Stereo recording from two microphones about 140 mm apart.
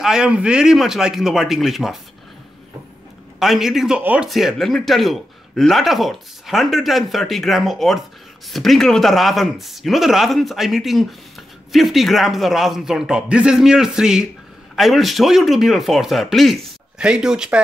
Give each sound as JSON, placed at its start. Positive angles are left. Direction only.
{"t": 0.0, "sound": "speech", "side_deg": -5}
{"t": 3.3, "sound": "speech", "side_deg": 0}